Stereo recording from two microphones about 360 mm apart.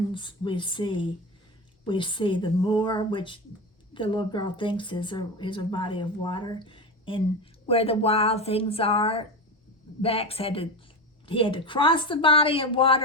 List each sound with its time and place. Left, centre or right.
0.1 s speech: centre